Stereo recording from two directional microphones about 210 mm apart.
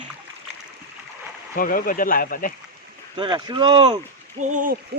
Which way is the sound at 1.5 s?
40° left (ahead or behind).